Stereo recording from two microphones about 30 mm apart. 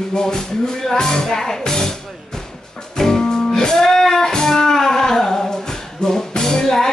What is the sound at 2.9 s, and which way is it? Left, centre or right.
Music, centre.